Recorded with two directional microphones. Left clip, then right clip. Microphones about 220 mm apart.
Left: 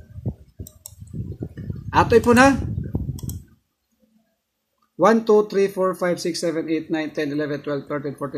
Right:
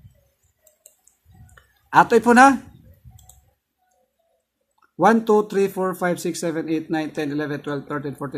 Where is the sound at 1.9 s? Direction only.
15° right (ahead or behind).